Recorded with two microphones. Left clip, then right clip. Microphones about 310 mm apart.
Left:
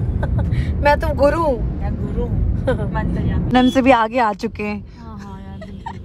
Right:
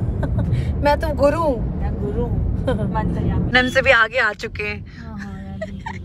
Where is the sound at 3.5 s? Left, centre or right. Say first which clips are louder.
Left 1 dB; centre.